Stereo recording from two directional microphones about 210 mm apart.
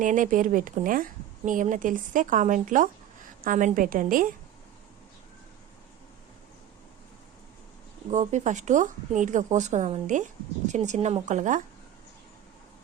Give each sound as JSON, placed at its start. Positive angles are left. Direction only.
{"t": 0.0, "sound": "speech", "side_deg": -40}
{"t": 8.1, "sound": "speech", "side_deg": -35}